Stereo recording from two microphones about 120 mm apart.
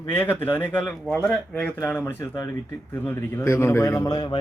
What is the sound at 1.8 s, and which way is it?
A man's voice, 20° left (ahead or behind).